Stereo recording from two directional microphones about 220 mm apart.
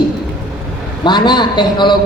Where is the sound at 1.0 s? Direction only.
20° left (ahead or behind).